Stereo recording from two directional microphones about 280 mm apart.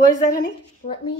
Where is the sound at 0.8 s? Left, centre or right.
Left.